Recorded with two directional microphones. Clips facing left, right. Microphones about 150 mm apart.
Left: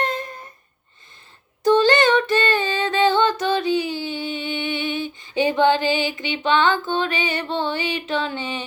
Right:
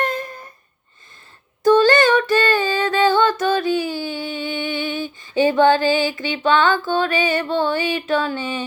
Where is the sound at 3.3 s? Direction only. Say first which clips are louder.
Right 2 dB; 50° right (ahead or behind).